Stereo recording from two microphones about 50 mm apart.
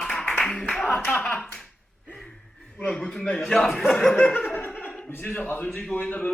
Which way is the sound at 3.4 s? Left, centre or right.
Centre.